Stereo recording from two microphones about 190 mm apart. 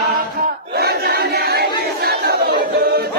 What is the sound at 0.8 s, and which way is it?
Crowd, 55° right (ahead or behind).